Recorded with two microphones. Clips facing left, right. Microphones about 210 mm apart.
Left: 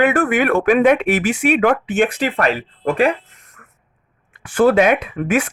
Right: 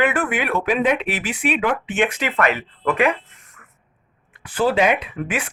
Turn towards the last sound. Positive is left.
turn(degrees=45)  # may be behind; listen again after turning